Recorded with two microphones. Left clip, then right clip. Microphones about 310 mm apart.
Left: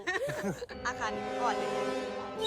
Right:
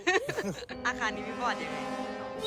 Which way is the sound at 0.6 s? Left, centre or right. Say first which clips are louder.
Right 3 dB; centre.